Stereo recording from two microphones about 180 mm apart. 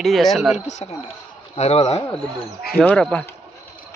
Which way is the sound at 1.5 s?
35° left (ahead or behind).